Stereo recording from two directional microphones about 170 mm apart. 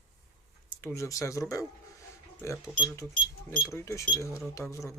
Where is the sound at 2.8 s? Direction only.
15° left (ahead or behind).